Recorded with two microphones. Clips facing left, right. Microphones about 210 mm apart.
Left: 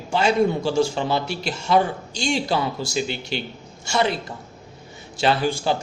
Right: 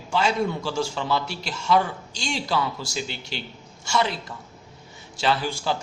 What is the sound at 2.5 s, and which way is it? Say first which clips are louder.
Speech: left 2 dB; 25° left (ahead or behind).